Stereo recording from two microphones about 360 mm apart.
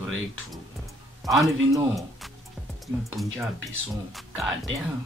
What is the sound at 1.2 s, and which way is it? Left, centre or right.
Speech, centre.